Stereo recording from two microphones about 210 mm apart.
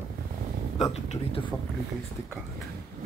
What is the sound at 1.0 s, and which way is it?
Speech, 30° left (ahead or behind).